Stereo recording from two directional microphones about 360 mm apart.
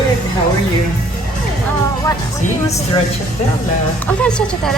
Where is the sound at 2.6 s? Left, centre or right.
Centre.